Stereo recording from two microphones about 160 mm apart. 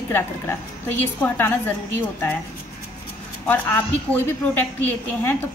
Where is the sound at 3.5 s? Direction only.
15° left (ahead or behind).